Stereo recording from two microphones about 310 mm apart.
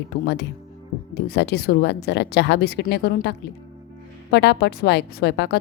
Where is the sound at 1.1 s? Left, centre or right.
Left.